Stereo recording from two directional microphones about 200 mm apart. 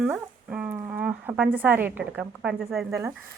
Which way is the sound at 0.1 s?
5° right (ahead or behind).